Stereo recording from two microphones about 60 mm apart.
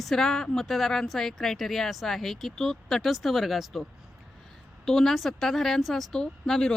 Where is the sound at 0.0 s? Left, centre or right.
Centre.